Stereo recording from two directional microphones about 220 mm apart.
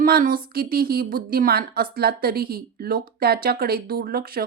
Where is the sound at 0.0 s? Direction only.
40° right (ahead or behind).